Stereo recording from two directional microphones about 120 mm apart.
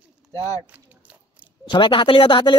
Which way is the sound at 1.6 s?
40° left (ahead or behind).